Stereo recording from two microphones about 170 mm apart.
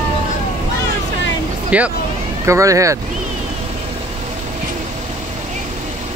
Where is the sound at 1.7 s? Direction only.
10° right (ahead or behind).